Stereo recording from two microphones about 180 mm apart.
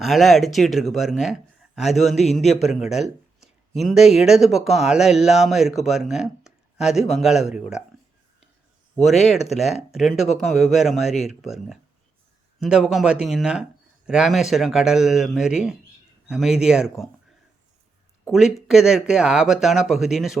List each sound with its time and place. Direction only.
0.0 s speech: centre (ahead or behind)
2.4 s speech: 40° left (ahead or behind)
2.6 s speech: centre (ahead or behind)
9.0 s speech: centre (ahead or behind)
18.3 s speech: centre (ahead or behind)